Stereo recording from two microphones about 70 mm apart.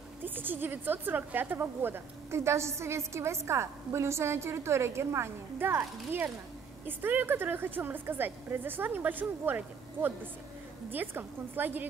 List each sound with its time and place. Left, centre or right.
0.2 s a woman's voice: right
10.9 s a woman's voice: right